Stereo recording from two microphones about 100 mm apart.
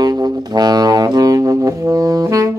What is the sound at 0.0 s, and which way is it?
Music, 40° right (ahead or behind).